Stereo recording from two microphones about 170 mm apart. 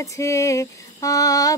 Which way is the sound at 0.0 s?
20° left (ahead or behind).